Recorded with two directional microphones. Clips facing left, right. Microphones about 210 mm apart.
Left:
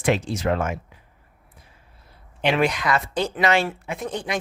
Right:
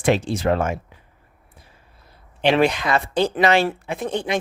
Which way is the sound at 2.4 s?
30° right (ahead or behind).